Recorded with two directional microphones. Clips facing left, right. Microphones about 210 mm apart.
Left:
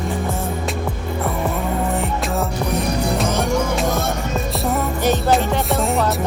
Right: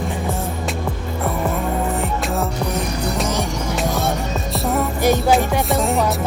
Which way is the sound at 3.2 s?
55° left (ahead or behind).